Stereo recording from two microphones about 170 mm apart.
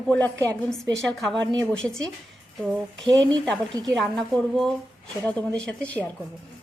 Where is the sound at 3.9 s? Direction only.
Centre (ahead or behind).